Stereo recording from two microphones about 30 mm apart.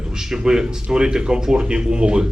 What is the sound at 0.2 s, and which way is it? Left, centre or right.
A man's voice, right.